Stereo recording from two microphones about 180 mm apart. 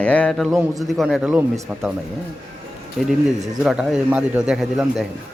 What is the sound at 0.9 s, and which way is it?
Speech, centre (ahead or behind).